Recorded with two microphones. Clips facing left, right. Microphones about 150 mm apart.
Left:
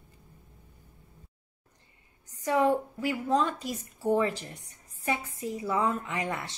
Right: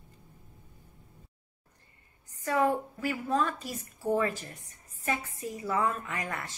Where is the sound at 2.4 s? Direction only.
15° left (ahead or behind).